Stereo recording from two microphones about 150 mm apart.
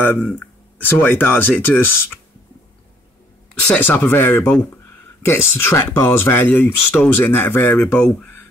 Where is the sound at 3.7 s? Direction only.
10° left (ahead or behind).